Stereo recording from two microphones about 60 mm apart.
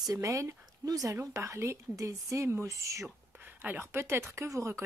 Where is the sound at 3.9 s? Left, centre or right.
Right.